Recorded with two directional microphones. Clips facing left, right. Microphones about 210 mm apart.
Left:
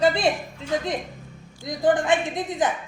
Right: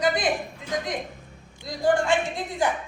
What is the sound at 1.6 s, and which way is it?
Speech, 20° left (ahead or behind).